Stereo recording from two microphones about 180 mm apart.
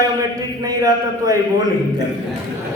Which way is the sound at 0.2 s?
20° right (ahead or behind).